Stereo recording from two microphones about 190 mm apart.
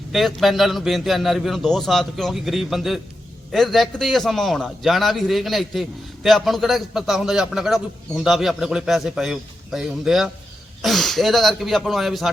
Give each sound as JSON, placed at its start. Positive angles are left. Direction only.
{"t": 0.1, "sound": "a man's voice", "side_deg": 0}